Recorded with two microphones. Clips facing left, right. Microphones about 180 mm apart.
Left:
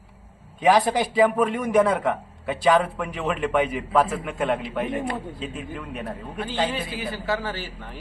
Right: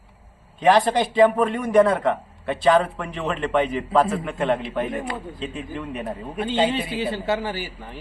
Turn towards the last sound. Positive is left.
turn(degrees=-5)  # may be behind; listen again after turning